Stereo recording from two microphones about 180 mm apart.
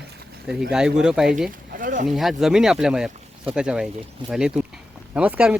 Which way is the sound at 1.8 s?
50° right (ahead or behind).